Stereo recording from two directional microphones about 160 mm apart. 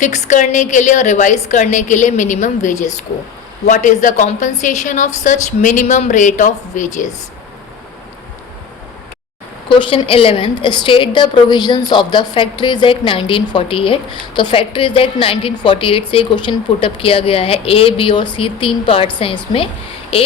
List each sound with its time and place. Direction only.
0.0 s a woman's voice: 50° left (ahead or behind)
9.6 s a woman's voice: 30° left (ahead or behind)